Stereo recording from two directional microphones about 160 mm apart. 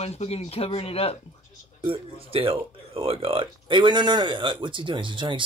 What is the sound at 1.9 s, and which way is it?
Speech, 35° right (ahead or behind).